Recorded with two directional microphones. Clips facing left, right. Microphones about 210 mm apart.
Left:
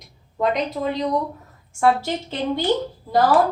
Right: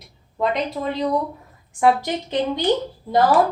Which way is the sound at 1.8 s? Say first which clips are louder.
Right 1 dB; 15° right (ahead or behind).